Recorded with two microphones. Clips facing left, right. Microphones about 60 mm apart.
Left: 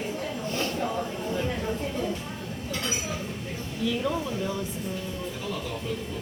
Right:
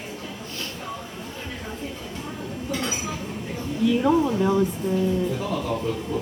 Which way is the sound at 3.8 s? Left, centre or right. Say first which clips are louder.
Right 8 dB; right.